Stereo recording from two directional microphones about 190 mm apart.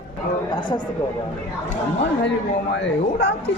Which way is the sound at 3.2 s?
60° left (ahead or behind).